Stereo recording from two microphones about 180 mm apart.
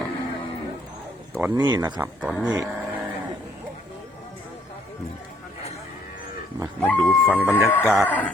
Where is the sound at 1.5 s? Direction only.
25° right (ahead or behind).